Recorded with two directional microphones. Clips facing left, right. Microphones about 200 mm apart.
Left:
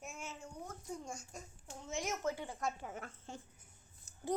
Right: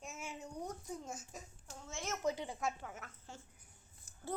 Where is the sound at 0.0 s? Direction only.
Centre (ahead or behind).